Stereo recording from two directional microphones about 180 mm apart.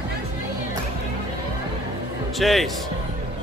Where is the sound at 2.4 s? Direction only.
Centre (ahead or behind).